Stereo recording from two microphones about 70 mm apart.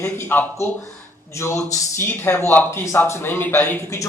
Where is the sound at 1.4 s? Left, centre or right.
Left.